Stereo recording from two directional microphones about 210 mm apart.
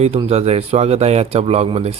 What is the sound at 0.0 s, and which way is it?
Speech, 30° right (ahead or behind).